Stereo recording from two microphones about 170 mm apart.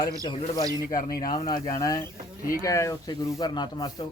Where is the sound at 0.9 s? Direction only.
55° left (ahead or behind).